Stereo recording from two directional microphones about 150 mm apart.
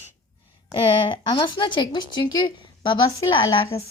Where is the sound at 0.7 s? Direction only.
30° left (ahead or behind).